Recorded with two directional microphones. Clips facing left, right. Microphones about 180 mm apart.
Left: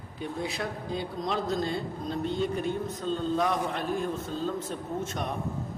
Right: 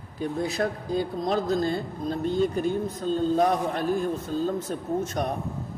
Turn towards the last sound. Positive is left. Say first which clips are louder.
# right 5 dB
turn(degrees=-40)  # may be behind; listen again after turning